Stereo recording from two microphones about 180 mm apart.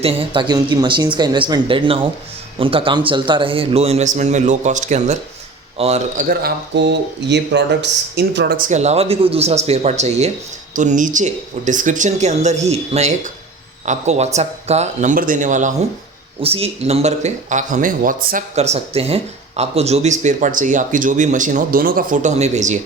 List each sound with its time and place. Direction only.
0.0 s speech: 30° right (ahead or behind)
6.2 s speech: 55° right (ahead or behind)
8.6 s speech: 40° right (ahead or behind)
16.4 s speech: 30° right (ahead or behind); by 18.4 s 50° right (ahead or behind)
18.5 s speech: 35° right (ahead or behind)